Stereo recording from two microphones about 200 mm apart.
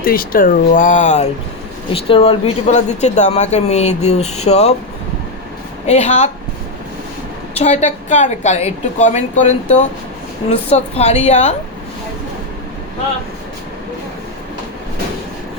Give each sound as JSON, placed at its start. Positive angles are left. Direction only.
{"t": 0.0, "sound": "speech", "side_deg": 45}
{"t": 5.8, "sound": "speech", "side_deg": 35}
{"t": 7.6, "sound": "speech", "side_deg": 35}